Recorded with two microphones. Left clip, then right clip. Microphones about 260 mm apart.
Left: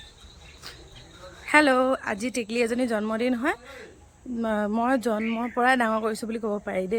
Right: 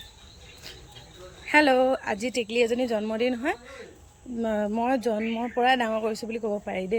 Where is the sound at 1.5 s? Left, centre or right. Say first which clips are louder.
Even; centre.